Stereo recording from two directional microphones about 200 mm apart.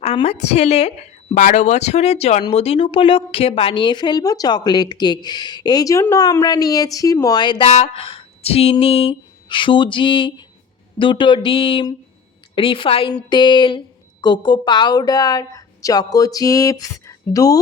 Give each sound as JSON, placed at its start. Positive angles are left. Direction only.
{"t": 0.0, "sound": "a woman's voice", "side_deg": 30}